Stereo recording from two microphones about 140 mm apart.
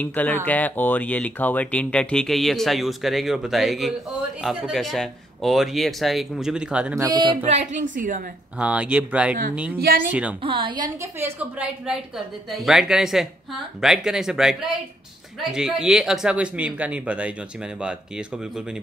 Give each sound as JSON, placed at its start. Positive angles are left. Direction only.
{"t": 0.0, "sound": "speech", "side_deg": 10}
{"t": 7.0, "sound": "a woman's voice", "side_deg": -30}
{"t": 7.4, "sound": "a woman's voice", "side_deg": -55}
{"t": 8.5, "sound": "speech", "side_deg": -10}
{"t": 9.8, "sound": "speech", "side_deg": -90}
{"t": 10.4, "sound": "a woman's voice", "side_deg": -35}
{"t": 11.0, "sound": "speech", "side_deg": -20}